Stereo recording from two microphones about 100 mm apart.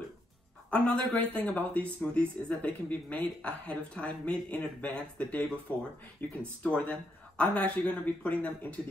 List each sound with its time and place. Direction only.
0.7 s speech: 15° left (ahead or behind)